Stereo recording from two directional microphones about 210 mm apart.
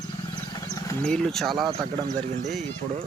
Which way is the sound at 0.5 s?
15° left (ahead or behind).